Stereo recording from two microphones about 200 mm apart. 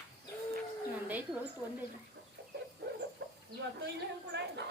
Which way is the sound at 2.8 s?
55° right (ahead or behind).